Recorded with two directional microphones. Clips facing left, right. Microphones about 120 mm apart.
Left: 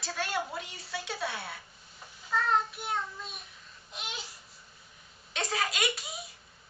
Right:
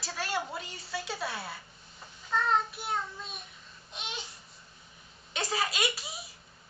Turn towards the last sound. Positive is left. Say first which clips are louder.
# even
turn(degrees=0)  # may be behind; listen again after turning